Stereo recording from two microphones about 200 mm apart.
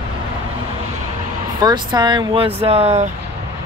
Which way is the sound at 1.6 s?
20° right (ahead or behind).